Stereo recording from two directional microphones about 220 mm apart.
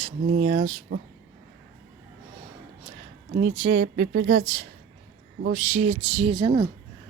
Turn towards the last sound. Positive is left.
turn(degrees=-20)  # may be behind; listen again after turning